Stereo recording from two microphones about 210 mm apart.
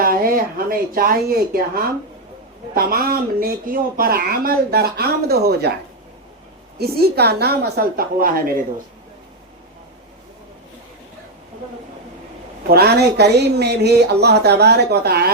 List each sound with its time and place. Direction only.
0.0 s speech: 45° right (ahead or behind)
6.7 s speech: 50° right (ahead or behind)
12.6 s speech: 50° right (ahead or behind)